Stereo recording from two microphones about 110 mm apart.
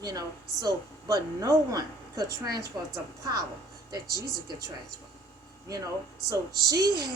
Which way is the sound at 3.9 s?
35° right (ahead or behind).